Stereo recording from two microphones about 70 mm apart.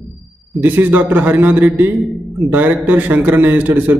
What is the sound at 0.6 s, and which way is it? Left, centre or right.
A man's voice, right.